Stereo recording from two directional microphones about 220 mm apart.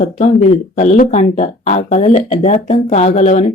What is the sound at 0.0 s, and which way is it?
Speech, 35° left (ahead or behind).